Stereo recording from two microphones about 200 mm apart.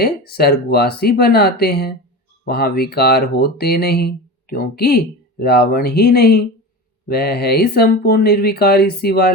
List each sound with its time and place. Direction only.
0.0 s speech: 50° left (ahead or behind)